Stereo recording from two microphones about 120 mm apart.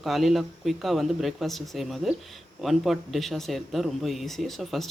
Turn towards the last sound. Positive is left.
turn(degrees=0)  # may be behind; listen again after turning